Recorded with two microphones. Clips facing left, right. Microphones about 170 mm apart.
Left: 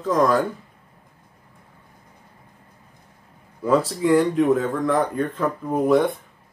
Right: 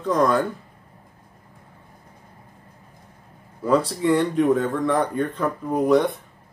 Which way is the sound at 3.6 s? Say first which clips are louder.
Left 1 dB; centre (ahead or behind).